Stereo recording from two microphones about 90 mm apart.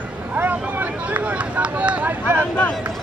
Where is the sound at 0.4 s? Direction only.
20° right (ahead or behind).